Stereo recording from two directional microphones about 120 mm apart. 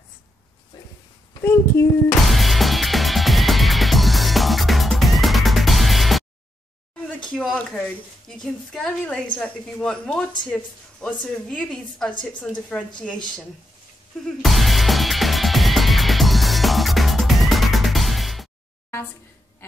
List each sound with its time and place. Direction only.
1.4 s speech: 25° left (ahead or behind)
2.2 s music: centre (ahead or behind)
7.3 s a woman's voice: 5° left (ahead or behind)
14.2 s music: centre (ahead or behind)